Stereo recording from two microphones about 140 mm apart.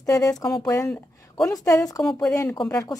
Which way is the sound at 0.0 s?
25° left (ahead or behind).